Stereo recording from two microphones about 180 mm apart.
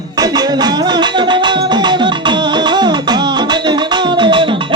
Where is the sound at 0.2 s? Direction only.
20° right (ahead or behind).